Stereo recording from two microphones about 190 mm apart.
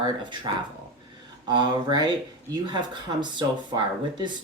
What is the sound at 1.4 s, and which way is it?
Speech, 20° right (ahead or behind).